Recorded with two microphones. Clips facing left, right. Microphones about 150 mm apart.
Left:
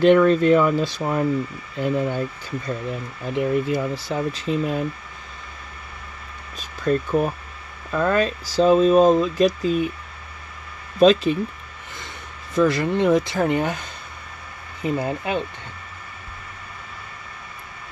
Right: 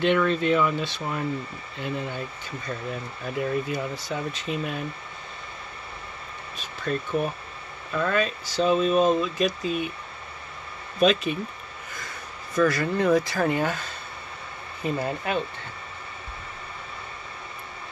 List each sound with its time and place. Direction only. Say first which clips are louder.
0.0 s speech: left 8 dB; 40° left (ahead or behind)
3.3 s speech: left 6 dB; 25° left (ahead or behind)
6.8 s speech: left 6 dB; 40° left (ahead or behind)
11.0 s speech: left 6 dB; 30° left (ahead or behind)
12.5 s speech: left 4 dB; 20° left (ahead or behind)